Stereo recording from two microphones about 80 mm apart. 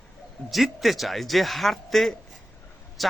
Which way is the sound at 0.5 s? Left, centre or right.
Centre.